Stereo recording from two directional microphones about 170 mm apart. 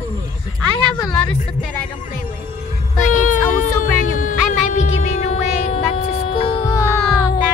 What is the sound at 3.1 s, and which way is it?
Music, 50° left (ahead or behind).